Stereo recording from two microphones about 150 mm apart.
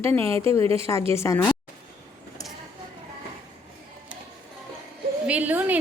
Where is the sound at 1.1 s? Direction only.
15° left (ahead or behind).